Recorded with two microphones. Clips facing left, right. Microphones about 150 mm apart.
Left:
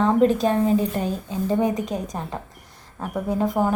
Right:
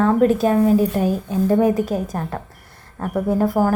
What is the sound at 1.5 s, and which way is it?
Speech, 50° right (ahead or behind).